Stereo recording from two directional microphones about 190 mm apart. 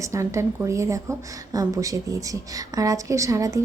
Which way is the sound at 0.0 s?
15° right (ahead or behind).